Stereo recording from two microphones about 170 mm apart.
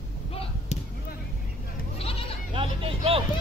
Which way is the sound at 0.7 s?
40° left (ahead or behind).